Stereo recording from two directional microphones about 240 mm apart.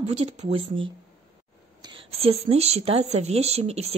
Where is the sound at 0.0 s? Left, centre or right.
Right.